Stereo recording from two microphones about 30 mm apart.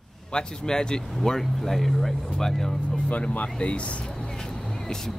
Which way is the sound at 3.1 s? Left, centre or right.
Left.